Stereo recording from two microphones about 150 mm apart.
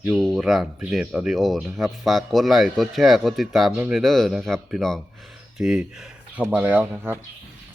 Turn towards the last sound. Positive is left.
turn(degrees=-15)  # may be behind; listen again after turning